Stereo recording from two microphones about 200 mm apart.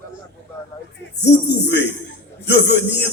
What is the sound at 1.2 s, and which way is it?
Speech, 60° left (ahead or behind).